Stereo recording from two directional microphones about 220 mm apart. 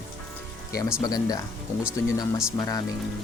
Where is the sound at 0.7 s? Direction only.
15° left (ahead or behind).